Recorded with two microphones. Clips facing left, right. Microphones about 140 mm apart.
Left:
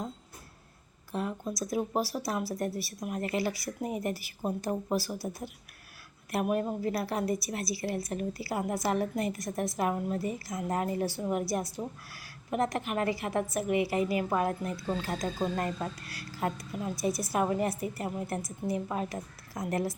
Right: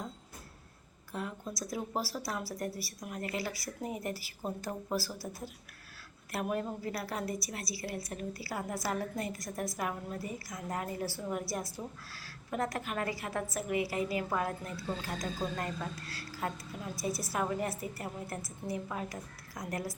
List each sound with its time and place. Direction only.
1.1 s a woman's voice: 20° left (ahead or behind)
6.3 s a woman's voice: 20° left (ahead or behind)